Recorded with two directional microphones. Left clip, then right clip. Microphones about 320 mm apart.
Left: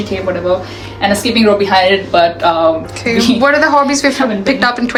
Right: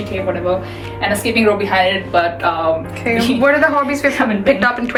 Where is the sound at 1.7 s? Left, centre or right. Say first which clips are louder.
Left 4 dB; left.